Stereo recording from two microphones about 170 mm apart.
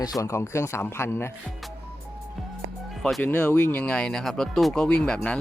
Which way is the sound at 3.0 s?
5° left (ahead or behind).